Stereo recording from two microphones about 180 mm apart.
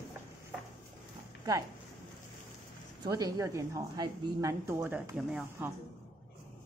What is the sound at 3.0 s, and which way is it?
A woman's voice, 20° right (ahead or behind).